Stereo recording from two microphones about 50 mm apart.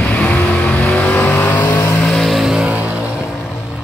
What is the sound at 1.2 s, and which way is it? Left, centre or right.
Vehicle, left.